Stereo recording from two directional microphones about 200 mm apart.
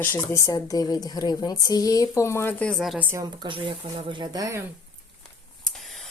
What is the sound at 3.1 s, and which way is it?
Speech, 20° right (ahead or behind).